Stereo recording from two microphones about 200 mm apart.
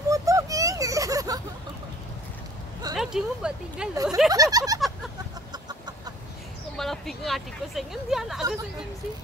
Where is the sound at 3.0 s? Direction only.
5° right (ahead or behind).